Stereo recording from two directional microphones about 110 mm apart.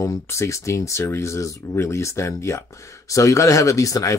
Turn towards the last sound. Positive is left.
turn(degrees=30)  # may be behind; listen again after turning